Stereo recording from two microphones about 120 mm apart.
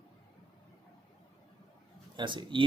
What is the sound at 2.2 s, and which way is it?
Speech, 40° right (ahead or behind).